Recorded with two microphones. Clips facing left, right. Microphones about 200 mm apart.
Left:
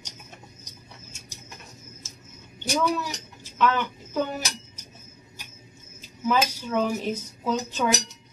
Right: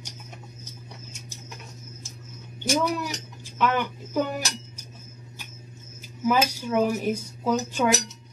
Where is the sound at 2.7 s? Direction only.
10° right (ahead or behind).